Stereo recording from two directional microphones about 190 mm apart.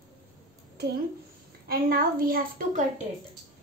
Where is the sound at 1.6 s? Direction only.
55° right (ahead or behind).